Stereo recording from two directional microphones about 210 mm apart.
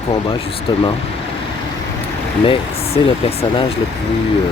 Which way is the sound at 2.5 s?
25° left (ahead or behind).